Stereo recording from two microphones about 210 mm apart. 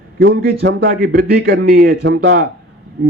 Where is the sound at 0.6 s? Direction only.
45° right (ahead or behind).